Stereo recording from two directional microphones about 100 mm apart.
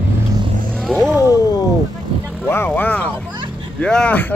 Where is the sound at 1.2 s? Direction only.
35° left (ahead or behind).